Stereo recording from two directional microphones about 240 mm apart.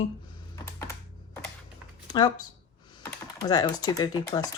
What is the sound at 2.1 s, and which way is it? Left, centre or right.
Speech, centre.